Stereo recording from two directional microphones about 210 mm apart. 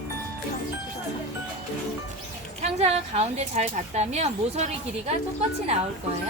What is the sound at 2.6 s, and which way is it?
Speech, 30° right (ahead or behind).